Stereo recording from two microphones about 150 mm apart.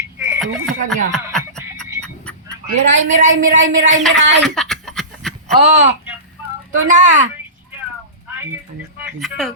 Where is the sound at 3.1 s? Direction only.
55° right (ahead or behind).